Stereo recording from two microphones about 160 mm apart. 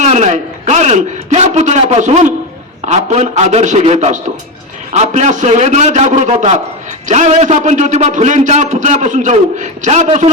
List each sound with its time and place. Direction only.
0.0 s a man's voice: 45° right (ahead or behind)